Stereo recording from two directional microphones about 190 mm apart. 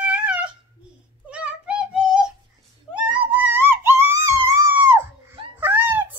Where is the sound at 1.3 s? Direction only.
5° right (ahead or behind).